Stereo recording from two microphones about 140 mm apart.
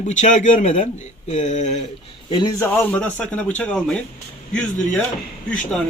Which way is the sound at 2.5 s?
15° left (ahead or behind).